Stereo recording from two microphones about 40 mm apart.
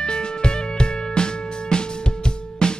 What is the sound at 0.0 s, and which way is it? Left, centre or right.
Music, left.